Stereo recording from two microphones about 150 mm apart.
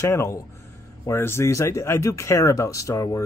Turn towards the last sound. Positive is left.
turn(degrees=20)  # may be behind; listen again after turning